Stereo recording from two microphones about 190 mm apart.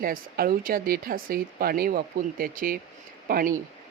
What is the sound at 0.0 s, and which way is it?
Speech, 50° right (ahead or behind).